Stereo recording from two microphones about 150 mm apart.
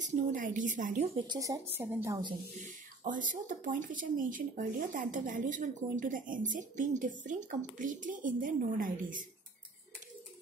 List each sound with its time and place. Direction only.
0.0 s speech: 60° right (ahead or behind)
1.2 s speech: 25° right (ahead or behind)
3.0 s speech: 60° right (ahead or behind)